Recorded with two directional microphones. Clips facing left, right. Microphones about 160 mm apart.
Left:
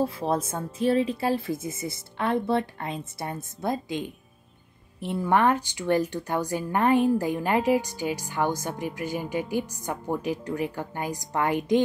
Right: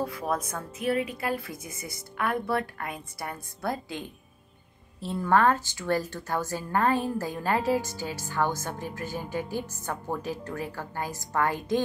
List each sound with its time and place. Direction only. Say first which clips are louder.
0.0 s a woman's voice: left 4 dB; 30° left (ahead or behind)